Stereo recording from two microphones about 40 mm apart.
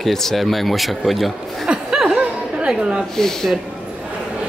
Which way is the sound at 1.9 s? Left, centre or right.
Centre.